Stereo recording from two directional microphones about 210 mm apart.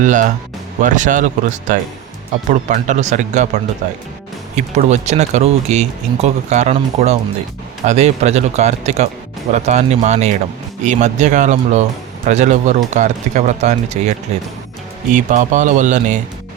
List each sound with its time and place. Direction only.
0.0 s speech: 35° right (ahead or behind)
15.1 s speech: 35° right (ahead or behind)